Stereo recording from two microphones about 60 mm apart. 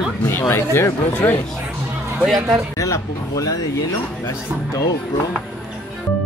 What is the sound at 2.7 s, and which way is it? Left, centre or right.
Speech, left.